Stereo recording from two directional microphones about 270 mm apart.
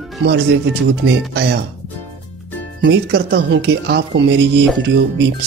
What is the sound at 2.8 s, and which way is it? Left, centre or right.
Speech, right.